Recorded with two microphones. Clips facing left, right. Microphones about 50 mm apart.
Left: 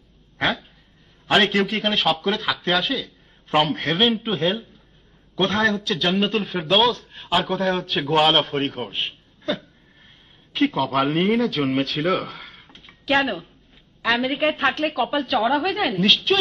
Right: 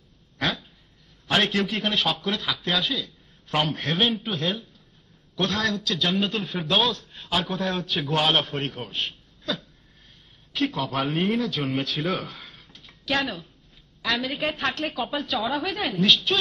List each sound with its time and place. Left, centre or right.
1.3 s a man's voice: centre
4.2 s a woman's voice: left
5.9 s a man's voice: centre
8.8 s a sound: left
10.8 s a man's voice: centre
12.5 s a sound: left
14.0 s a woman's voice: left
15.0 s a man's voice: centre